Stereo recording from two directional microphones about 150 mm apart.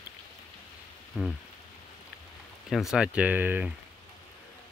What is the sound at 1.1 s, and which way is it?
Rain, 5° right (ahead or behind).